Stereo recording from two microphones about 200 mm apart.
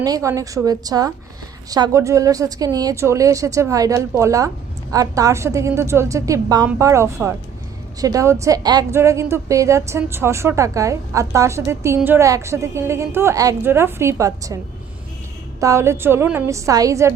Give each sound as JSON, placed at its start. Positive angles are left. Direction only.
{"t": 0.0, "sound": "speech", "side_deg": -15}
{"t": 15.6, "sound": "speech", "side_deg": -15}